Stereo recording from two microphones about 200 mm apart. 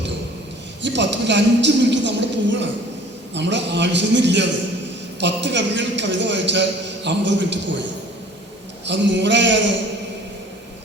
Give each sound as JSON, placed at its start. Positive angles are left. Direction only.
{"t": 0.8, "sound": "a man's voice", "side_deg": -60}
{"t": 8.9, "sound": "a man's voice", "side_deg": -60}